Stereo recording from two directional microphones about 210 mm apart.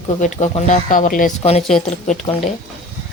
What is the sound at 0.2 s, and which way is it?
Speech, 35° left (ahead or behind).